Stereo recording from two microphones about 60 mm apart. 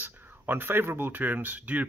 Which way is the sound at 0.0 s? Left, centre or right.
Right.